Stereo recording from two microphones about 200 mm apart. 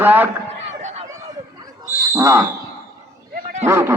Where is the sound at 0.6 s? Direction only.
30° right (ahead or behind).